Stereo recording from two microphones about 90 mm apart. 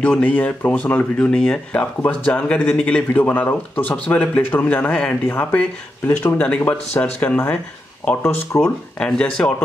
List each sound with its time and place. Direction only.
0.0 s speech: 15° left (ahead or behind)
9.0 s speech: 10° left (ahead or behind)